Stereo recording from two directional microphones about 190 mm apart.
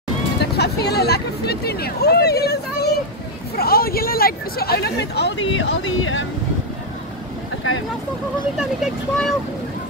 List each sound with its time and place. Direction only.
0.6 s speech: 60° left (ahead or behind); by 6.2 s 80° left
8.5 s speech: 5° right (ahead or behind)